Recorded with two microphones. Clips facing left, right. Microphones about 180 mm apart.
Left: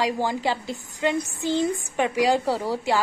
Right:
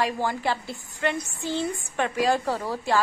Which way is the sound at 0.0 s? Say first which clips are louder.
Left 2 dB; 15° left (ahead or behind).